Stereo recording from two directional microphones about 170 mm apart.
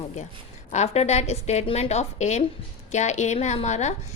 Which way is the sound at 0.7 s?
40° left (ahead or behind).